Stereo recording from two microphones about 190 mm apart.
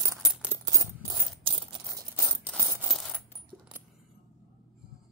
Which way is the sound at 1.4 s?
30° right (ahead or behind).